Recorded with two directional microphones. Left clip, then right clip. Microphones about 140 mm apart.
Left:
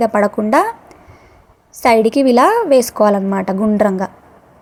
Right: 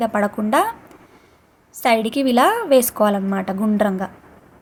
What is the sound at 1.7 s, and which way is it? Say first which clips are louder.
A woman's voice: left 6 dB; 35° left (ahead or behind).